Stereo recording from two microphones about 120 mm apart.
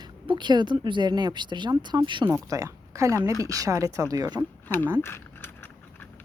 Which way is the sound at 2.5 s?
25° right (ahead or behind).